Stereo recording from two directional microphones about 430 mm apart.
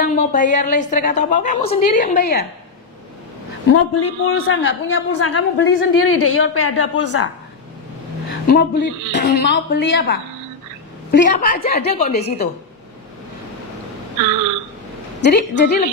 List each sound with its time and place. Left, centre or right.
0.0 s a woman's voice: centre
3.6 s a man's voice: left
8.5 s a man's voice: left
15.1 s a man's voice: left